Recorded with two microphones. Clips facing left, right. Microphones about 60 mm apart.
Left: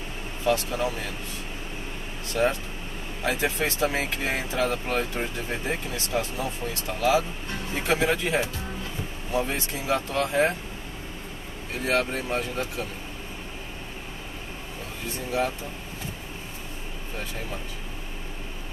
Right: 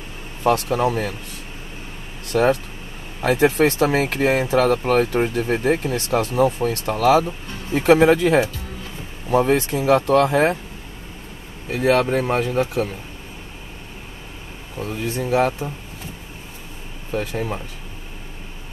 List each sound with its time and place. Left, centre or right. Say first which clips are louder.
0.4 s speech: right 7 dB; right
2.3 s speech: right 7 dB; right
9.3 s speech: right 11 dB; right
11.7 s speech: right 8 dB; right
15.0 s speech: right 8 dB; right
17.1 s speech: right 11 dB; right